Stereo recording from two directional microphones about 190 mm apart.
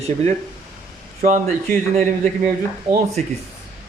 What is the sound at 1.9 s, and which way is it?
Speech, 35° right (ahead or behind).